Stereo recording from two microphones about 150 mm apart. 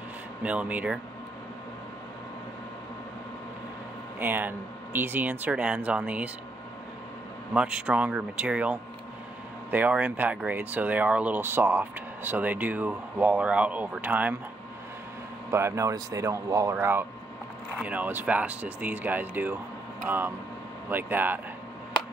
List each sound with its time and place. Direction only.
0.4 s speech: 10° right (ahead or behind)
4.2 s speech: 15° right (ahead or behind)
7.5 s speech: 5° right (ahead or behind)
15.5 s speech: 20° right (ahead or behind)